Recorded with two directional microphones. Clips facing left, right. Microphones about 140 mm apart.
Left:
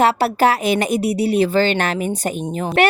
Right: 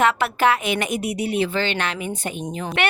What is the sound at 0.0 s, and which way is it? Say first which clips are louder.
A woman's voice: left 4 dB; 35° left (ahead or behind).